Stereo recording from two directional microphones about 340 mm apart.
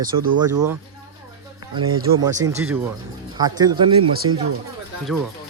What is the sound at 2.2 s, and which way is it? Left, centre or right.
Speech, centre.